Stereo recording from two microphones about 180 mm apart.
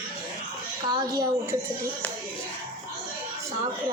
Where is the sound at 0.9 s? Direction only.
25° right (ahead or behind).